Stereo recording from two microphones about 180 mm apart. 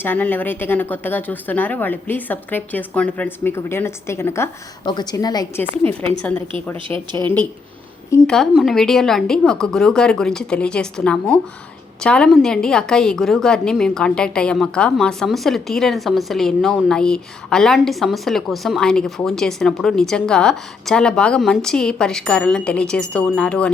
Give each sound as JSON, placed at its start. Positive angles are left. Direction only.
{"t": 0.0, "sound": "a woman's voice", "side_deg": 10}
{"t": 5.8, "sound": "speech", "side_deg": 10}
{"t": 6.8, "sound": "speech", "side_deg": -25}
{"t": 8.3, "sound": "a woman's voice", "side_deg": 0}